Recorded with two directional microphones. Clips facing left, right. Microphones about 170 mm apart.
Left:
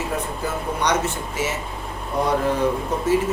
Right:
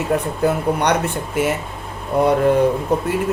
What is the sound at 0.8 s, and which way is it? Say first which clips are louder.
Speech: right 3 dB; 60° right (ahead or behind).